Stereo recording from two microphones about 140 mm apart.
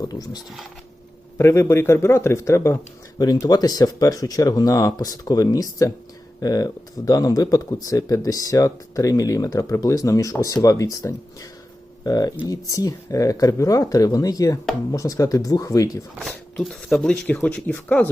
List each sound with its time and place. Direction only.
0.0 s speech: 25° left (ahead or behind)
1.4 s speech: 20° left (ahead or behind)
16.6 s speech: 5° left (ahead or behind)